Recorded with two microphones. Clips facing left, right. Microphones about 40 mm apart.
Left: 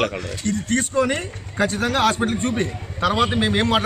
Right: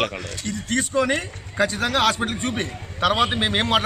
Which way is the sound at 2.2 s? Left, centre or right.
Right.